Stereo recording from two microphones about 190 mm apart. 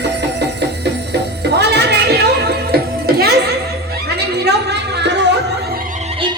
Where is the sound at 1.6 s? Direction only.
60° right (ahead or behind).